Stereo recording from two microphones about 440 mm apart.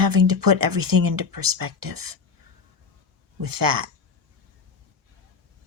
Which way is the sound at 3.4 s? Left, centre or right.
Right.